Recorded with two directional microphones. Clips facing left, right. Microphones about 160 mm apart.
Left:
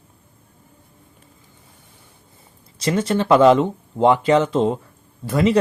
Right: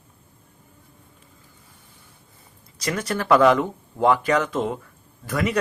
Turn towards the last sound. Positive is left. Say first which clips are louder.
# left 6 dB
turn(degrees=25)  # may be behind; listen again after turning